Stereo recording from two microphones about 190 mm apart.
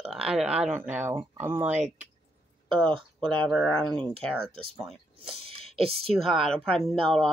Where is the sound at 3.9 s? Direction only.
25° right (ahead or behind).